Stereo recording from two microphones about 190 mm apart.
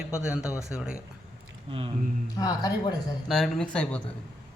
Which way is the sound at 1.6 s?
25° right (ahead or behind).